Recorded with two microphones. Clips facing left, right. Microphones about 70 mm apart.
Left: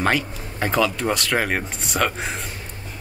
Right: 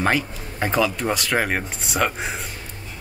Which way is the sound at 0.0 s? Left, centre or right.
Centre.